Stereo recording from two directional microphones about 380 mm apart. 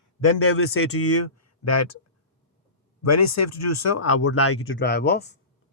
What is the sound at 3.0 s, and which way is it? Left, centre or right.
Speech, left.